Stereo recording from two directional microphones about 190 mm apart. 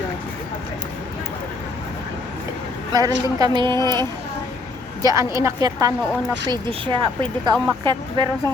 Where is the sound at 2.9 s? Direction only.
20° right (ahead or behind).